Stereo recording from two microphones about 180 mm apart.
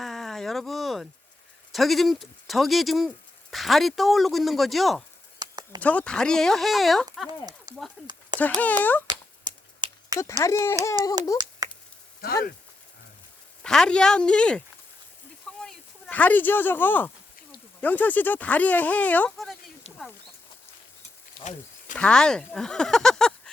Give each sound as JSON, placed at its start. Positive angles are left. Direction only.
{"t": 0.0, "sound": "speech", "side_deg": 0}
{"t": 5.4, "sound": "a sound", "side_deg": -25}
{"t": 5.8, "sound": "speech", "side_deg": 10}
{"t": 7.3, "sound": "speech", "side_deg": -20}
{"t": 8.0, "sound": "speech", "side_deg": 0}
{"t": 9.0, "sound": "a sound", "side_deg": -25}
{"t": 10.2, "sound": "speech", "side_deg": 15}
{"t": 11.6, "sound": "chop", "side_deg": -20}
{"t": 12.2, "sound": "speech", "side_deg": 55}
{"t": 13.7, "sound": "speech", "side_deg": 5}
{"t": 15.6, "sound": "speech", "side_deg": 5}
{"t": 21.9, "sound": "speech", "side_deg": 5}